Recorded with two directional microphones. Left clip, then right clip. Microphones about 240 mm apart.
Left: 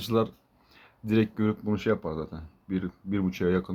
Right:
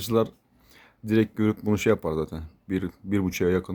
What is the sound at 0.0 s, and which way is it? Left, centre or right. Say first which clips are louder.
Speech: right 3 dB; right.